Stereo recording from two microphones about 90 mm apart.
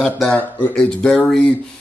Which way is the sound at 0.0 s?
10° left (ahead or behind).